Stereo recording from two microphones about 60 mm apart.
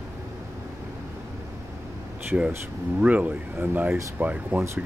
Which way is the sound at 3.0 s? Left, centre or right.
Right.